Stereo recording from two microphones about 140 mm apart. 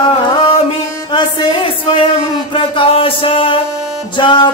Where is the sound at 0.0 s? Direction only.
40° left (ahead or behind).